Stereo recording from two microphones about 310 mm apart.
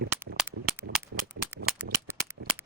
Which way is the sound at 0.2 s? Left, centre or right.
Centre.